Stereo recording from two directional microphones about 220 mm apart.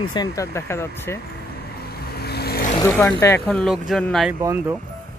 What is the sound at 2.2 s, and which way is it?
Vehicle, 45° left (ahead or behind).